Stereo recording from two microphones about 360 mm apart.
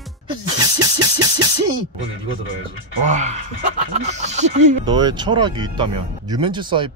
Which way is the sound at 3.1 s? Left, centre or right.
Centre.